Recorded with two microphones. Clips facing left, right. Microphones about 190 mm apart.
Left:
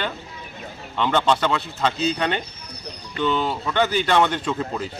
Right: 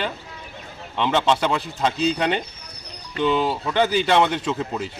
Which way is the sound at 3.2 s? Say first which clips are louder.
Right 2 dB; 10° right (ahead or behind).